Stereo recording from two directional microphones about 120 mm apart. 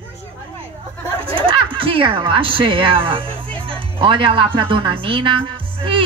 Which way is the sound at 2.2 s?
45° right (ahead or behind).